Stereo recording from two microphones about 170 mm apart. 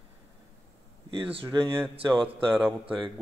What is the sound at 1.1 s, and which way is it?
Speech, 30° right (ahead or behind).